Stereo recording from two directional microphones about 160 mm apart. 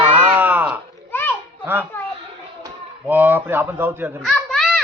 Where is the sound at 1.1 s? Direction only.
15° left (ahead or behind).